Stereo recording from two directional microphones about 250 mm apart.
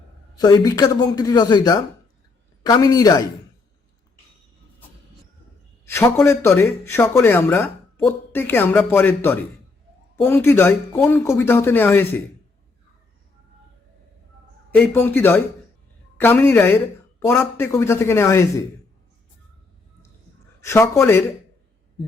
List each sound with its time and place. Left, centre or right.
0.3 s a man's voice: centre
5.8 s a man's voice: centre
14.8 s a man's voice: centre
20.6 s a man's voice: centre